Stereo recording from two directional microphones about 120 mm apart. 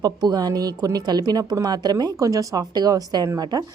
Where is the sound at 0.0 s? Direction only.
35° right (ahead or behind).